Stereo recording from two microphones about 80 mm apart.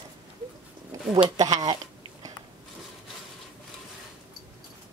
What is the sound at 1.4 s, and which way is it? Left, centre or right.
Speech, right.